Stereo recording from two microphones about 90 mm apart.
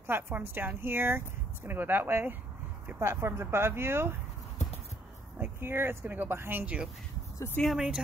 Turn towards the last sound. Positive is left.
turn(degrees=-5)  # may be behind; listen again after turning